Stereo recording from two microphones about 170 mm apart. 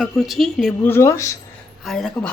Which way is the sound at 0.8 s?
15° left (ahead or behind).